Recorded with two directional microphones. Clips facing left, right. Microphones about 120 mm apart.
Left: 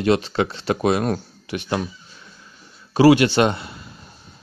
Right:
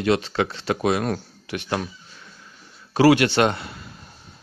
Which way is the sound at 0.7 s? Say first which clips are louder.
Left 3 dB; 35° left (ahead or behind).